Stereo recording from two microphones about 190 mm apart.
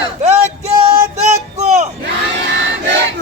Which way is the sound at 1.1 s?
40° right (ahead or behind).